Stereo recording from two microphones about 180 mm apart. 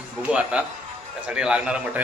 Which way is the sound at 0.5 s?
5° right (ahead or behind).